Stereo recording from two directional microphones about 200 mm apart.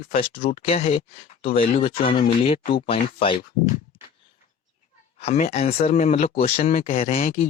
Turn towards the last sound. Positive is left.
turn(degrees=45)  # may be behind; listen again after turning